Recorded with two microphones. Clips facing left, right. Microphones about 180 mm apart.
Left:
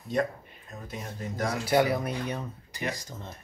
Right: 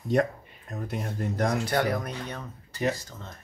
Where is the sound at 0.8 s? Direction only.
60° right (ahead or behind).